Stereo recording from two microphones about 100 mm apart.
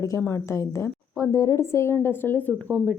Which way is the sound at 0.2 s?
25° left (ahead or behind).